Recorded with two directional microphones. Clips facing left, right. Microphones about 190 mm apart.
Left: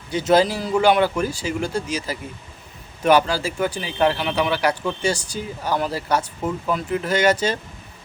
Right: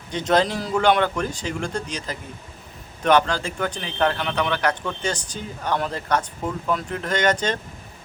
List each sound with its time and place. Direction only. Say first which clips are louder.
0.1 s a man's voice: left 3 dB; 5° left (ahead or behind)